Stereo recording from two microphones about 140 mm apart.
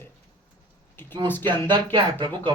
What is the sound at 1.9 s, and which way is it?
Speech, 35° right (ahead or behind).